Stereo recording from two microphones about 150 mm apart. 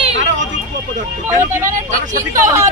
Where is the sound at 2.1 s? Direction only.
60° right (ahead or behind).